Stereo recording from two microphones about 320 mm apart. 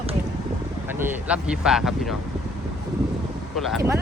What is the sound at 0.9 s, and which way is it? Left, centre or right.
Speech, centre.